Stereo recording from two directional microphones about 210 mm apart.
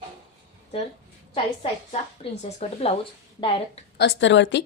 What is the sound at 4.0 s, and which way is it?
Speech, 55° left (ahead or behind).